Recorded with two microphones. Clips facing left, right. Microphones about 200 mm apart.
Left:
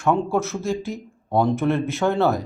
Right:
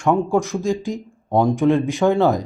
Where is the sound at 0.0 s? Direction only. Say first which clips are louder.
Right 3 dB; 15° right (ahead or behind).